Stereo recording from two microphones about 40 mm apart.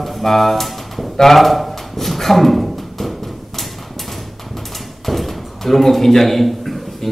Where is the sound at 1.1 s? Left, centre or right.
Centre.